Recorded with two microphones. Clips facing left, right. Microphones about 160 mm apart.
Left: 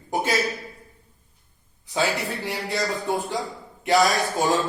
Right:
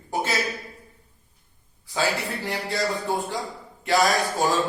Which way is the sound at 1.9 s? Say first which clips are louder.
Left 1 dB; 20° left (ahead or behind).